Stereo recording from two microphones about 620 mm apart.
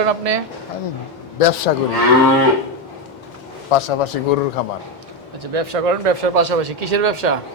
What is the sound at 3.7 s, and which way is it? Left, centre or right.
Speech, left.